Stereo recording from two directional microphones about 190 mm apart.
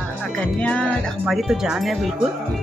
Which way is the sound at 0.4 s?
5° left (ahead or behind).